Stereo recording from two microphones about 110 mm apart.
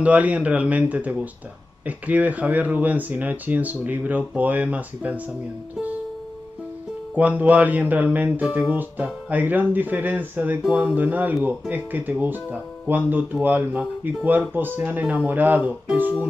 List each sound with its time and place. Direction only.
0.0 s speech: 10° right (ahead or behind)
7.2 s speech: 15° right (ahead or behind)